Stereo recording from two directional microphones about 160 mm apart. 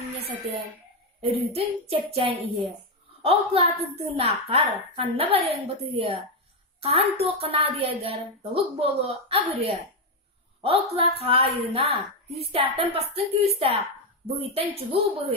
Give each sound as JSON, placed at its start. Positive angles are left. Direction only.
{"t": 1.2, "sound": "a woman's voice", "side_deg": -35}